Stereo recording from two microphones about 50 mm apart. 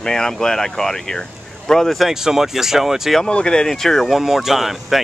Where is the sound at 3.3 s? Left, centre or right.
Centre.